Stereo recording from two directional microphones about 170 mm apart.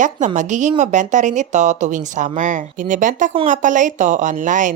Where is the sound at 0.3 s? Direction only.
45° right (ahead or behind).